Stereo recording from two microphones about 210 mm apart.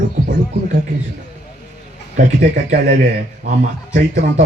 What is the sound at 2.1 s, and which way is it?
Speech, 35° right (ahead or behind).